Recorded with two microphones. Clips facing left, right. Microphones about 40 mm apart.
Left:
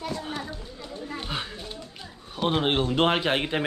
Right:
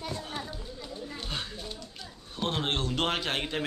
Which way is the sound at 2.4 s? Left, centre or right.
Centre.